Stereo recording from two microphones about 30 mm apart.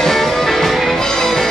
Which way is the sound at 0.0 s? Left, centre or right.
Centre.